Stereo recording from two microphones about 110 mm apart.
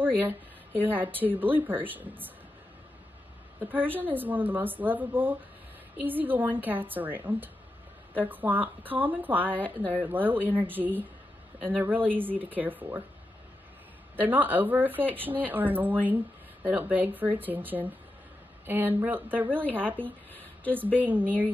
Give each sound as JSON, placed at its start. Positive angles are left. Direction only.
{"t": 0.0, "sound": "speech", "side_deg": -15}
{"t": 3.5, "sound": "speech", "side_deg": -15}
{"t": 14.1, "sound": "speech", "side_deg": -15}
{"t": 20.0, "sound": "a sound", "side_deg": 15}
{"t": 20.7, "sound": "speech", "side_deg": -15}